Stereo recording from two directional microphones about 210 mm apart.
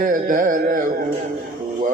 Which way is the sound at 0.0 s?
40° right (ahead or behind).